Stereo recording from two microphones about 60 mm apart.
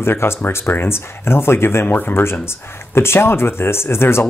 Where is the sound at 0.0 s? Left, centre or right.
Left.